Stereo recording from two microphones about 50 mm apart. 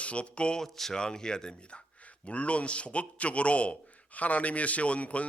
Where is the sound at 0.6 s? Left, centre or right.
Centre.